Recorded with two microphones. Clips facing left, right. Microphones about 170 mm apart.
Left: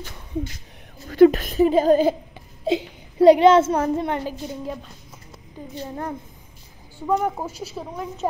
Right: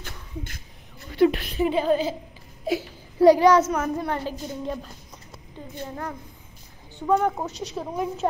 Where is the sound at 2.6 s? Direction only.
25° left (ahead or behind).